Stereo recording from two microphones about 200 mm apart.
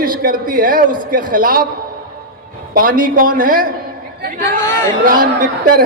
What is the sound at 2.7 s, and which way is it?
Speech, 45° right (ahead or behind).